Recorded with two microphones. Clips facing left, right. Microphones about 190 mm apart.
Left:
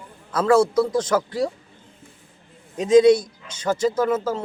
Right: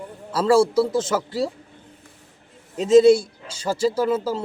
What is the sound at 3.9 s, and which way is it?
Speech, 10° right (ahead or behind).